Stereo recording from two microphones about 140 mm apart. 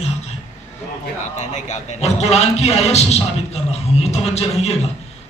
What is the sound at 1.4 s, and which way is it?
A man's voice, 55° left (ahead or behind).